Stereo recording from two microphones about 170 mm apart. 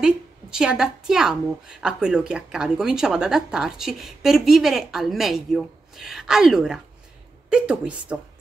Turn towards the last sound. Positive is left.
turn(degrees=-5)  # may be behind; listen again after turning